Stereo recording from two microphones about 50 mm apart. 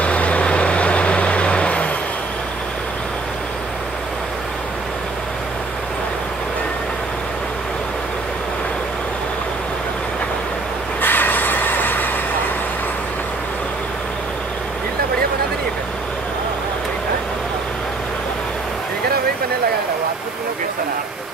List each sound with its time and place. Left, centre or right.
0.0 s vehicle: left
11.0 s vehicle: left